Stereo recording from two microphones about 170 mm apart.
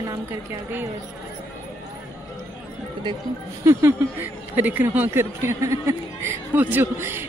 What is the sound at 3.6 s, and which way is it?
Speech, 15° right (ahead or behind).